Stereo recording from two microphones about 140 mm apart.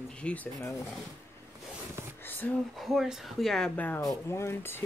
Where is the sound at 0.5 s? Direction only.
20° left (ahead or behind).